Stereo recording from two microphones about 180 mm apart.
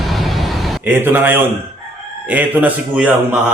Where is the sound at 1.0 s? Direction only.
10° right (ahead or behind).